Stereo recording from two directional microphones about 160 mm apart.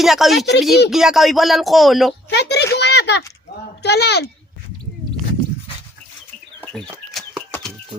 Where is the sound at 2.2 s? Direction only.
90° left.